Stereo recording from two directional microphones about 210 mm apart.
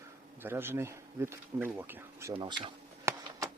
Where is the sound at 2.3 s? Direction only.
25° right (ahead or behind).